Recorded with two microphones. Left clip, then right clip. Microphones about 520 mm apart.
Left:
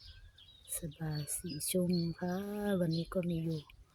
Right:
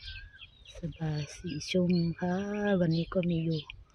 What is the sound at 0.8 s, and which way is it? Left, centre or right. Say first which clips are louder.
Speech: right 5 dB; left.